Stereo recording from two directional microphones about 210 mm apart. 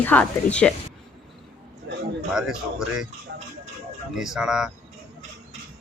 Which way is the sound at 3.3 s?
55° right (ahead or behind).